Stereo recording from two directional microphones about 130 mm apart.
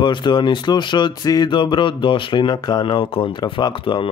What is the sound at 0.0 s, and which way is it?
Speech, 35° left (ahead or behind).